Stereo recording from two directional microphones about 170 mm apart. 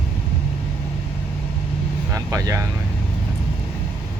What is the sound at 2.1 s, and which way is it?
Vehicle, 20° right (ahead or behind).